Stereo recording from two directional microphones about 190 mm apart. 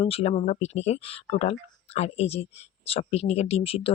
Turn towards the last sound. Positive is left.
turn(degrees=30)  # may be behind; listen again after turning